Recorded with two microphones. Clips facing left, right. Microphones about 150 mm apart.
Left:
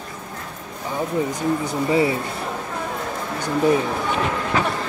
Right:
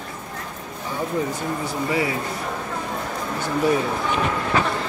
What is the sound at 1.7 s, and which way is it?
Speech, 25° left (ahead or behind).